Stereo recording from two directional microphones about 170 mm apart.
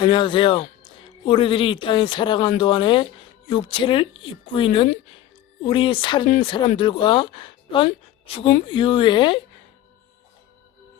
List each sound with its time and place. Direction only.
0.0 s speech: 30° left (ahead or behind)